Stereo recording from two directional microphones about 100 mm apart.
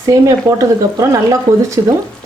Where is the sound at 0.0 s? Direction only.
35° right (ahead or behind).